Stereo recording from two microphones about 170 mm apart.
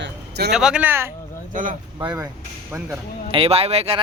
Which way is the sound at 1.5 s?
50° right (ahead or behind).